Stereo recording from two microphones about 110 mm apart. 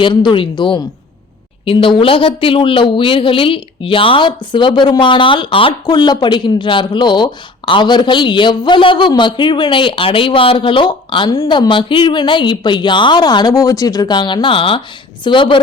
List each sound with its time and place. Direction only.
0.0 s speech: 50° left (ahead or behind)
5.8 s speech: 40° left (ahead or behind)